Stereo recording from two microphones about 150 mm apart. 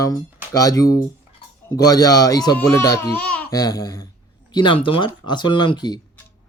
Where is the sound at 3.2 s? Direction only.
10° left (ahead or behind).